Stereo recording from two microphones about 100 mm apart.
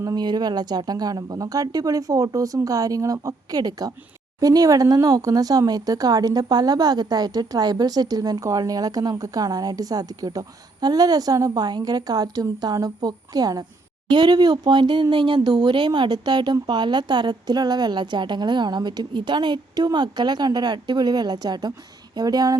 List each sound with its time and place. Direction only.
0.0 s speech: 40° right (ahead or behind)